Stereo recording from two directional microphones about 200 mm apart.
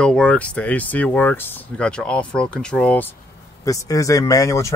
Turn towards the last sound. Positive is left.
turn(degrees=15)  # may be behind; listen again after turning